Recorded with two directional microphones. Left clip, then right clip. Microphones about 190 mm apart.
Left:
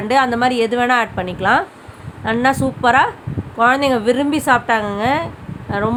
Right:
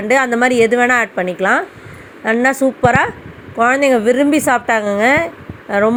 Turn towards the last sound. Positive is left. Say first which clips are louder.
# right 6 dB
turn(degrees=-20)  # may be behind; listen again after turning